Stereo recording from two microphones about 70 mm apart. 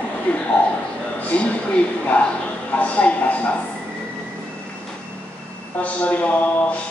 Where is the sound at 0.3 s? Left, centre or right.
Centre.